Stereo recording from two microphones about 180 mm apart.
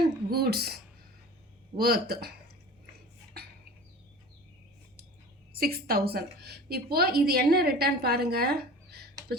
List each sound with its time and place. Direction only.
0.0 s a woman's voice: 60° right (ahead or behind)
5.5 s a woman's voice: 55° right (ahead or behind)